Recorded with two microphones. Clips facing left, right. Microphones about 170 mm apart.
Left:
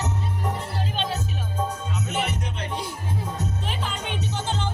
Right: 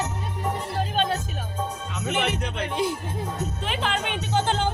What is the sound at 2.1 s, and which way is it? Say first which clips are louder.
Music: right 5 dB; 70° right (ahead or behind).